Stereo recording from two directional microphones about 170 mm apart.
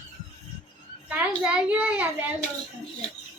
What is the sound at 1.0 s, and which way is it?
A child's voice, 10° right (ahead or behind).